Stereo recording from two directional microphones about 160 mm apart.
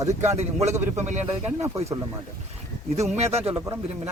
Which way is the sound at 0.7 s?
15° right (ahead or behind).